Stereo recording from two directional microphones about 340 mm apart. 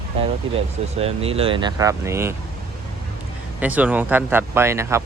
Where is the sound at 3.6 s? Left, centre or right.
Centre.